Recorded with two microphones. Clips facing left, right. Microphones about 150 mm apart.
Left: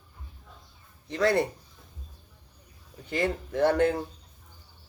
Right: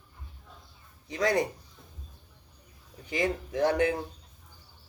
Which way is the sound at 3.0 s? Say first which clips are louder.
Left 1 dB; 15° right (ahead or behind).